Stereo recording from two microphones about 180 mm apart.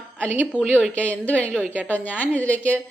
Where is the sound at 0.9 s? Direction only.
10° left (ahead or behind).